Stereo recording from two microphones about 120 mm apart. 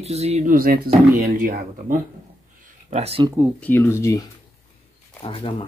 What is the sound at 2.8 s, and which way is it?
Speech, 60° right (ahead or behind).